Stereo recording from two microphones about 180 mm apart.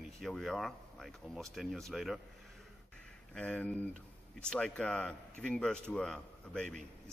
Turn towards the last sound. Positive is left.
turn(degrees=5)  # may be behind; listen again after turning